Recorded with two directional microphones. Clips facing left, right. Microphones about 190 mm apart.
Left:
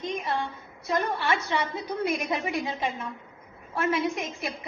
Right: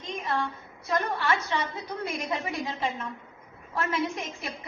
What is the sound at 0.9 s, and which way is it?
A woman's voice, 20° left (ahead or behind).